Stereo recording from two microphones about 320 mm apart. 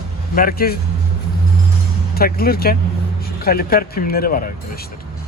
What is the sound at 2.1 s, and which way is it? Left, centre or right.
Speech, left.